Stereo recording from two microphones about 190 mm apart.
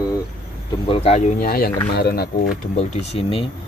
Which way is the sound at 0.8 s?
30° left (ahead or behind).